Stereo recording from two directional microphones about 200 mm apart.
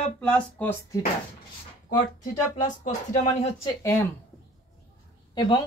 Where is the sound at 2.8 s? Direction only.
35° left (ahead or behind).